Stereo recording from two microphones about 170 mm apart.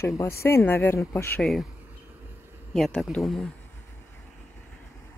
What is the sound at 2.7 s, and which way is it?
Speech, centre (ahead or behind).